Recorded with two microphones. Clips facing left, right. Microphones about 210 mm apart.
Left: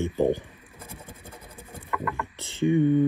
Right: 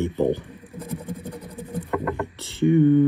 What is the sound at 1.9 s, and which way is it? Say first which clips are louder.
Patter: right 5 dB; 30° right (ahead or behind).